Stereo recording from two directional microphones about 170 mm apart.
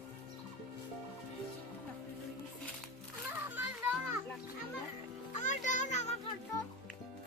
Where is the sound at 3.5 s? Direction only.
10° right (ahead or behind).